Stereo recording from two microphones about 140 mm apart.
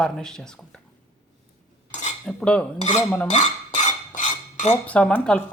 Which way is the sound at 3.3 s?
60° left (ahead or behind).